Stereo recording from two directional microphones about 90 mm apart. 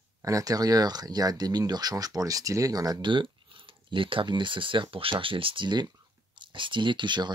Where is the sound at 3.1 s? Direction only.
70° right (ahead or behind).